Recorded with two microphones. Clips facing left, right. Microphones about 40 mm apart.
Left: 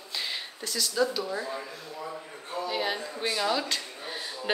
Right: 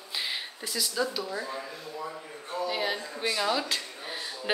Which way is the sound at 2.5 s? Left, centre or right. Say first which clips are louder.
Even; centre.